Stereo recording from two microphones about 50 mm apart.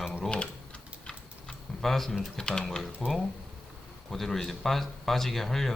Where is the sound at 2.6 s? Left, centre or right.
Centre.